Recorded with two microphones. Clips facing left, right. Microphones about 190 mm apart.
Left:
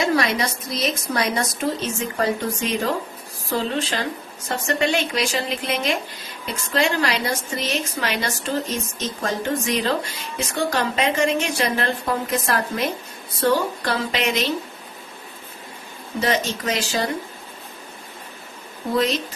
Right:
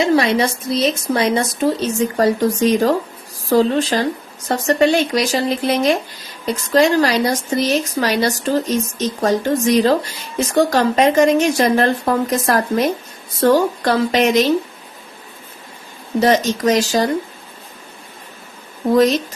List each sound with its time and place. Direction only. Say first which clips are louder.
0.0 s a woman's voice: right 6 dB; 30° right (ahead or behind)
2.1 s speech: right 7 dB; 40° right (ahead or behind)
16.2 s speech: right 8 dB; 40° right (ahead or behind)